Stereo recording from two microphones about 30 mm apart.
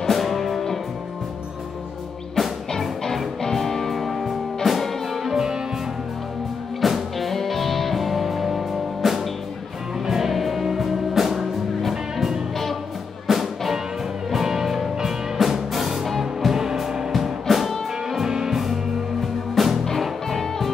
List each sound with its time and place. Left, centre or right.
0.1 s music: centre
2.4 s music: centre
5.2 s music: centre
6.8 s music: centre
18.2 s music: centre
18.5 s music: centre